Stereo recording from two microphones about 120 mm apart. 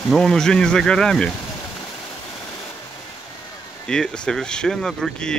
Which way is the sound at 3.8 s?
5° left (ahead or behind).